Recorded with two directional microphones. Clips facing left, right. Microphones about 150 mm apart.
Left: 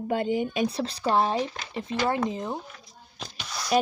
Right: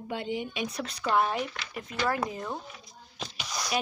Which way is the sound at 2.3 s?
20° left (ahead or behind).